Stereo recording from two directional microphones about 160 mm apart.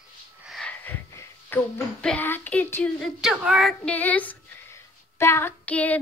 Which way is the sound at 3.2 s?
Centre (ahead or behind).